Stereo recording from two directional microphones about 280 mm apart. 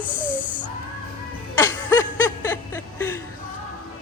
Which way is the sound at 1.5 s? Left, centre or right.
Centre.